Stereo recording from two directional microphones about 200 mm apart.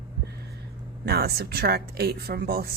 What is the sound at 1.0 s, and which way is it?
A woman's voice, 50° right (ahead or behind).